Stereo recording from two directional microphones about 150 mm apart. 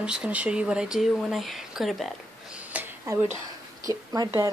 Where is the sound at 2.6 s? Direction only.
10° right (ahead or behind).